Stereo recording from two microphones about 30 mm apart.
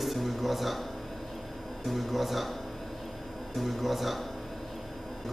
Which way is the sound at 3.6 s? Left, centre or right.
Centre.